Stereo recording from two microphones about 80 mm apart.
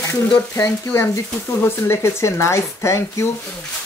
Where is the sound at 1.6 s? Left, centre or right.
Left.